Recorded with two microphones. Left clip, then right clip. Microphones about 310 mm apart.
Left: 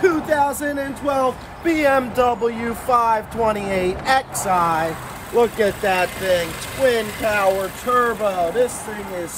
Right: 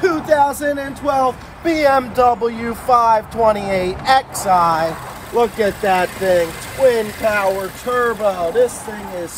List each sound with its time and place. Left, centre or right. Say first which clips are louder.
0.0 s speech: right 3 dB; centre
5.3 s speech: right 1 dB; centre